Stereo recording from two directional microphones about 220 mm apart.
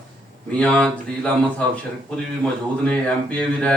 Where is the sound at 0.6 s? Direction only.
5° left (ahead or behind).